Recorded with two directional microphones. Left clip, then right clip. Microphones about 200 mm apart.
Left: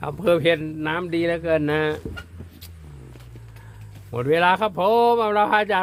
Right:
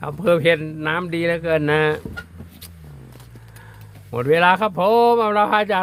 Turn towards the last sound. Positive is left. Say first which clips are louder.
# right 2 dB
turn(degrees=-15)  # may be behind; listen again after turning